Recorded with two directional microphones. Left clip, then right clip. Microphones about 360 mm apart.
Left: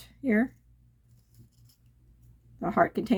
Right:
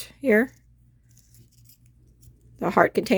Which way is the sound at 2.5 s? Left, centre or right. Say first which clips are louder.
Right 6 dB; right.